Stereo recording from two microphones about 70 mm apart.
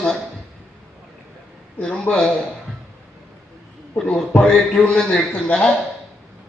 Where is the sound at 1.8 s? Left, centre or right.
Centre.